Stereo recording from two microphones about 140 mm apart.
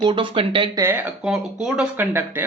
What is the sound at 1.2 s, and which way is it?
Speech, 5° right (ahead or behind).